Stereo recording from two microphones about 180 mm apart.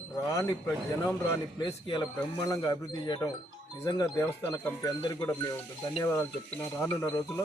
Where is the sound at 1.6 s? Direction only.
25° left (ahead or behind).